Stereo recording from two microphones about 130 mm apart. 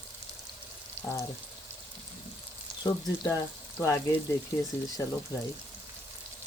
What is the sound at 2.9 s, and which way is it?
Speech, 25° left (ahead or behind).